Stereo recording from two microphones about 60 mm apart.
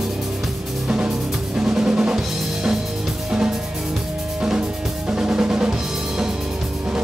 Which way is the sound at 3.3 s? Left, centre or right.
Centre.